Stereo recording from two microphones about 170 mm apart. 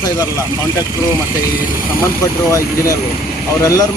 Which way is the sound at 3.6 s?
20° left (ahead or behind).